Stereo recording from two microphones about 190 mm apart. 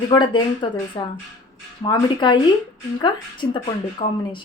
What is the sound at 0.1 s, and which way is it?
Speech, 25° left (ahead or behind).